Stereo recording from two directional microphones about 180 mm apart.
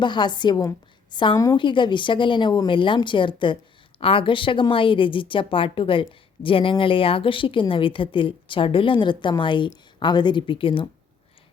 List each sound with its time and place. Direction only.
0.0 s a woman's voice: 25° left (ahead or behind)